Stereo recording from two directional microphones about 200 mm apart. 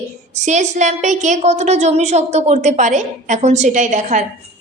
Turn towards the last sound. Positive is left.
turn(degrees=-40)  # may be behind; listen again after turning